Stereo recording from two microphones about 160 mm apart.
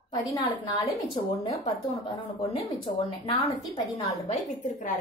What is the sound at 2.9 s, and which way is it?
Speech, 35° left (ahead or behind).